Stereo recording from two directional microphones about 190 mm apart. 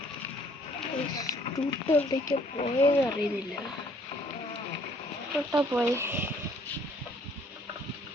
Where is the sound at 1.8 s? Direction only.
25° left (ahead or behind).